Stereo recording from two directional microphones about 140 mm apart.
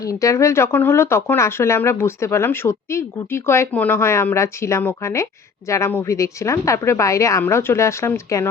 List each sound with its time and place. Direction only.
0.0 s speech: 25° left (ahead or behind)